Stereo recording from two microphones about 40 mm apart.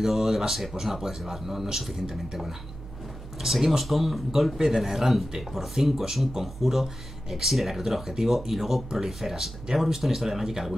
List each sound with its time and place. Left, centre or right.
0.0 s speech: centre